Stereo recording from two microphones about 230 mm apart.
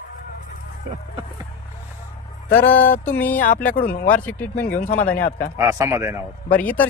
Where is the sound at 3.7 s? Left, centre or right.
Left.